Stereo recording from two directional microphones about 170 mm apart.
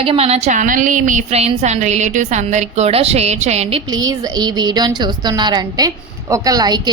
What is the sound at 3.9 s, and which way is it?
A woman's voice, 25° right (ahead or behind).